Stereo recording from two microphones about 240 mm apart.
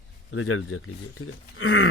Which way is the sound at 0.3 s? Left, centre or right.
Left.